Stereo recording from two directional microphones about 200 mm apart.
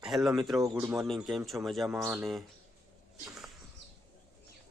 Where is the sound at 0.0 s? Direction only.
Centre (ahead or behind).